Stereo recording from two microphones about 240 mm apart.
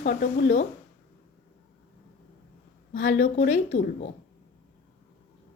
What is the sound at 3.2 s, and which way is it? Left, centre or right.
Speech, left.